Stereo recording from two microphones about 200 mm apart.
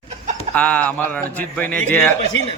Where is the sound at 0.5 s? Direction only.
5° left (ahead or behind).